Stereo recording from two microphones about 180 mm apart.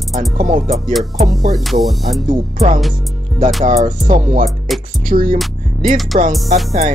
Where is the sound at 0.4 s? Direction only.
45° right (ahead or behind).